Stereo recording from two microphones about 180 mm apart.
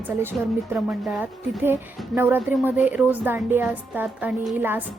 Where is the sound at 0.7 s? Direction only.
5° right (ahead or behind).